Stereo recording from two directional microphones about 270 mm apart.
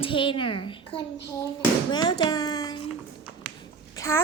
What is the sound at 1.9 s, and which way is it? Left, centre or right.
Speech, centre.